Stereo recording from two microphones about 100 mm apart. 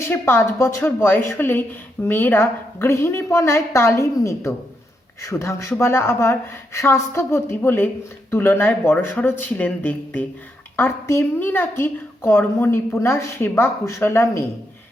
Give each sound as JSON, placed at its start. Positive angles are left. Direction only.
{"t": 0.0, "sound": "a woman's voice", "side_deg": 25}